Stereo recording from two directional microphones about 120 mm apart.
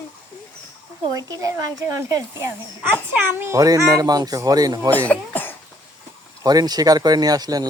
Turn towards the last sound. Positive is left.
turn(degrees=-35)  # may be behind; listen again after turning